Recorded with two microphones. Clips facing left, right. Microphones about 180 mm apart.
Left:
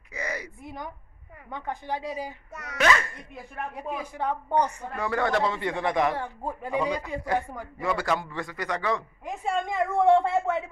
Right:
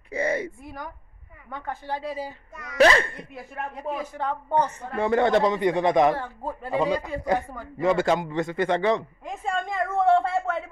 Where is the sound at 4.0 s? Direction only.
10° left (ahead or behind).